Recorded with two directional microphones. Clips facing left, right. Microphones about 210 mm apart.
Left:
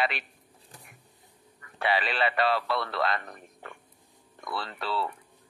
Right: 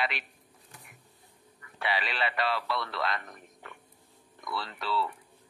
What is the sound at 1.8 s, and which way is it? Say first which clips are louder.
A man's voice: left 4 dB; 45° left (ahead or behind).